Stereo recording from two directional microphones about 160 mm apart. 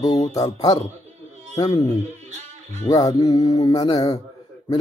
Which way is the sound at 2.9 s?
20° left (ahead or behind).